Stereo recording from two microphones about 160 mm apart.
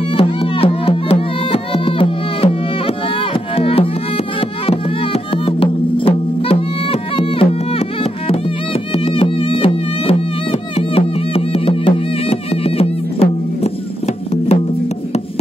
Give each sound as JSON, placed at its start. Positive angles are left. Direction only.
{"t": 0.2, "sound": "music", "side_deg": 35}
{"t": 3.5, "sound": "music", "side_deg": 35}
{"t": 8.9, "sound": "music", "side_deg": 35}